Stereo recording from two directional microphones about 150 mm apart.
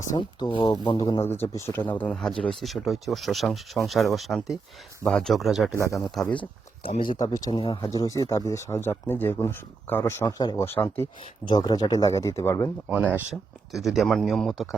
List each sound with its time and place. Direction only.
0.1 s speech: 30° left (ahead or behind)
1.2 s speech: 15° left (ahead or behind)
6.8 s speech: 35° left (ahead or behind)
7.8 s speech: 20° left (ahead or behind)
10.7 s speech: 15° left (ahead or behind)
11.4 s speech: 30° left (ahead or behind)
12.9 s speech: 10° right (ahead or behind)
13.3 s speech: centre (ahead or behind)